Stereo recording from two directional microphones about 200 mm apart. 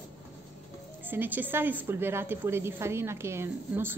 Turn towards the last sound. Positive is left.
turn(degrees=-10)  # may be behind; listen again after turning